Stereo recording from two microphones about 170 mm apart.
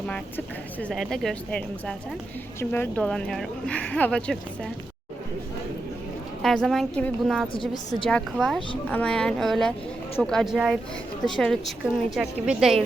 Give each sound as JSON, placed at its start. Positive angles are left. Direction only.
{"t": 0.1, "sound": "speech", "side_deg": 5}
{"t": 6.4, "sound": "speech", "side_deg": 5}
{"t": 7.5, "sound": "a woman's voice", "side_deg": 30}
{"t": 8.1, "sound": "speech", "side_deg": 0}